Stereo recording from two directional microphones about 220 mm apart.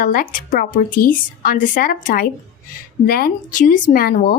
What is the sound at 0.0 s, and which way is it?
Speech, 40° left (ahead or behind).